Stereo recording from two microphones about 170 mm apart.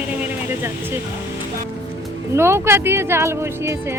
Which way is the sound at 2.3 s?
15° right (ahead or behind).